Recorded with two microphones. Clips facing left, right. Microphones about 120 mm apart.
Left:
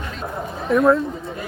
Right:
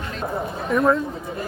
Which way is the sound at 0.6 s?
Centre (ahead or behind).